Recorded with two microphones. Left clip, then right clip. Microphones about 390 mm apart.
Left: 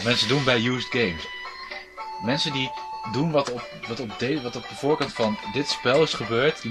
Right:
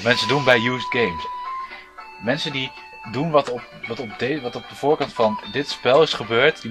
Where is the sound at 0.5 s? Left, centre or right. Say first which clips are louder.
Right 5 dB; centre.